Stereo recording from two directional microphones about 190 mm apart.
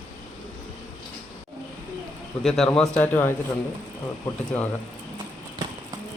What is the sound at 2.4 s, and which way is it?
Speech, centre (ahead or behind).